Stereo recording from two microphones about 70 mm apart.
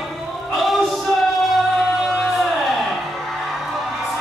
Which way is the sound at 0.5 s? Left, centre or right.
Centre.